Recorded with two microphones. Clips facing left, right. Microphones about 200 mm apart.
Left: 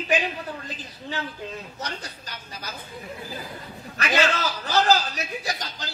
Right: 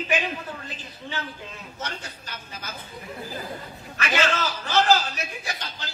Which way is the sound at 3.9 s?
40° left (ahead or behind).